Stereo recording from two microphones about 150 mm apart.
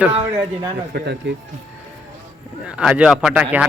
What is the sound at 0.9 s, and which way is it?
Speech, 90° right.